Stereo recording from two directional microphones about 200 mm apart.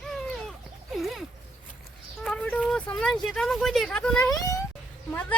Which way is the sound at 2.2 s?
5° left (ahead or behind).